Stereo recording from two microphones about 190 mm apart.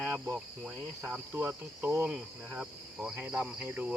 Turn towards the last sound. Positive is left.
turn(degrees=-10)  # may be behind; listen again after turning